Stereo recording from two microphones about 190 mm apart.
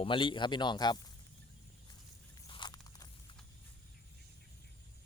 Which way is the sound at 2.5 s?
25° left (ahead or behind).